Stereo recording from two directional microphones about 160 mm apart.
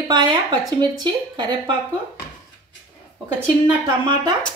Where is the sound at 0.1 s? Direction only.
30° right (ahead or behind).